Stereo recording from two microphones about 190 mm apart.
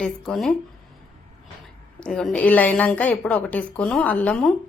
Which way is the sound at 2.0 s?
5° left (ahead or behind).